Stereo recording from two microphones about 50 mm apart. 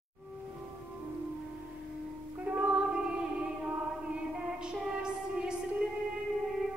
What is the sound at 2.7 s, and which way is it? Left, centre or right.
Music, centre.